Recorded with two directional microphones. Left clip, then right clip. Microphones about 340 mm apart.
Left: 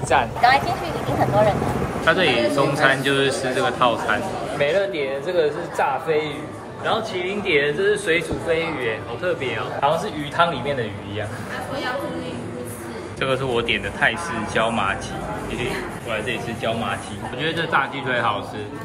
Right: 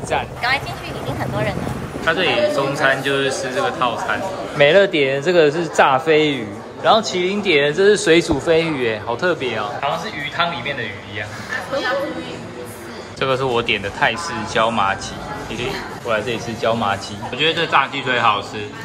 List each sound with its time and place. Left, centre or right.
0.1 s a man's voice: centre
2.0 s a man's voice: centre
4.6 s a man's voice: right
10.4 s a man's voice: centre
13.2 s a man's voice: centre